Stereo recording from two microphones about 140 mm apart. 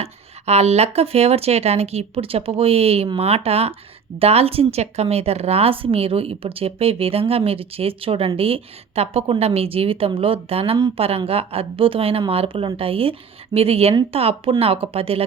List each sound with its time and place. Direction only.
0.0 s speech: 50° right (ahead or behind)